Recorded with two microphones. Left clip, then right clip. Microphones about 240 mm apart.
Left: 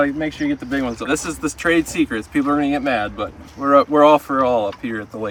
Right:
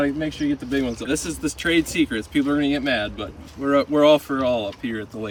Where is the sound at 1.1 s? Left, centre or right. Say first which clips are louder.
Left 5 dB; left.